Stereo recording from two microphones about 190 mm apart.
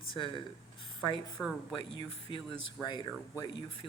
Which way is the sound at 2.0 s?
25° left (ahead or behind).